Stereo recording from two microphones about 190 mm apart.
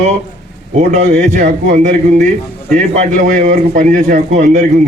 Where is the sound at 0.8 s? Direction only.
40° right (ahead or behind).